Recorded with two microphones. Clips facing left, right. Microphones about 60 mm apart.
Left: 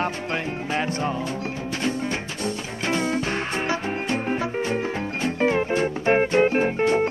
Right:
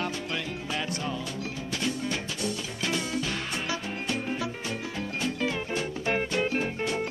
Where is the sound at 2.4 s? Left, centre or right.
Left.